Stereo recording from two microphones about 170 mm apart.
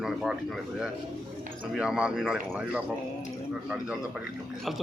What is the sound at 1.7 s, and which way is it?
A man's voice, 5° right (ahead or behind).